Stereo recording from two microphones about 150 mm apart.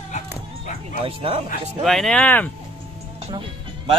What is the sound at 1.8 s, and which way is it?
Speech, centre (ahead or behind).